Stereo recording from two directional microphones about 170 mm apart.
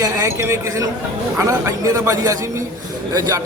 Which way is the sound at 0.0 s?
15° right (ahead or behind).